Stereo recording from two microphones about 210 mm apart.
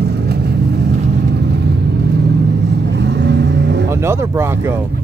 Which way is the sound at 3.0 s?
55° right (ahead or behind).